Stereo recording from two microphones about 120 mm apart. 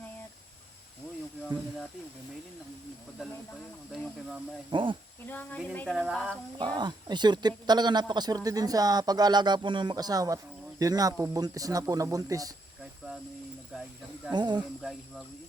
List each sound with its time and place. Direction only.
4.7 s speech: 45° right (ahead or behind)
5.2 s speech: 15° left (ahead or behind)
5.9 s speech: 5° right (ahead or behind)
6.6 s speech: 40° right (ahead or behind)
13.7 s snake: 5° right (ahead or behind)
14.3 s speech: 40° right (ahead or behind)
14.8 s speech: centre (ahead or behind)